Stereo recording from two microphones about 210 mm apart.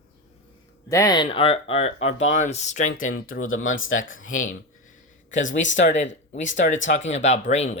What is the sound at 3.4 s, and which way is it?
Speech, 70° left (ahead or behind).